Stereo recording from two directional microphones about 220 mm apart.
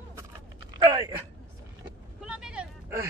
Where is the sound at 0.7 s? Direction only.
20° right (ahead or behind).